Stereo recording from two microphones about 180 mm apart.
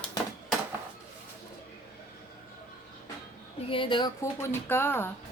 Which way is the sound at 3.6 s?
30° left (ahead or behind).